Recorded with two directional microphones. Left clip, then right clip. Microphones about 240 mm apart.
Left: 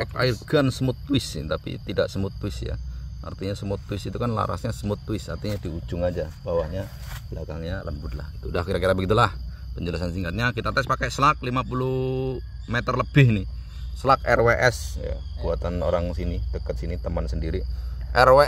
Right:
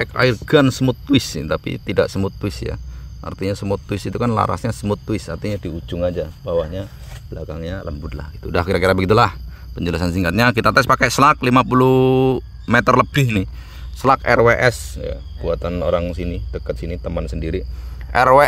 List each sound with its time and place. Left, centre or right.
0.1 s speech: right
14.0 s speech: right